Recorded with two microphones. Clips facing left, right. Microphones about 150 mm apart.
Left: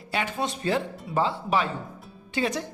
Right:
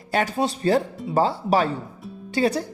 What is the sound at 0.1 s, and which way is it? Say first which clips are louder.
Speech: right 6 dB; 40° right (ahead or behind).